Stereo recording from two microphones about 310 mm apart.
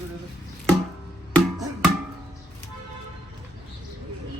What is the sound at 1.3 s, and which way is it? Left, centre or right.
Music, centre.